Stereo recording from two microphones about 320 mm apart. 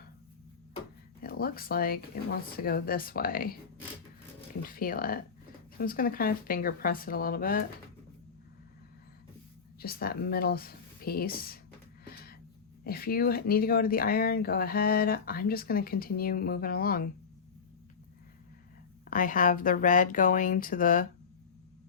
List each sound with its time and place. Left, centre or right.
1.2 s speech: left
9.8 s speech: left
12.0 s music: left
12.8 s speech: left
19.0 s speech: left